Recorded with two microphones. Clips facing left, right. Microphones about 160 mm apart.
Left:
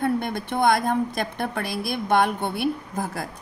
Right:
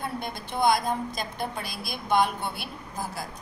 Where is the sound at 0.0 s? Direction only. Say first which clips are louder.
Left 9 dB; 55° left (ahead or behind).